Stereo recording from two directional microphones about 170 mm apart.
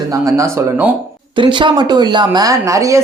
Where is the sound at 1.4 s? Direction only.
25° right (ahead or behind).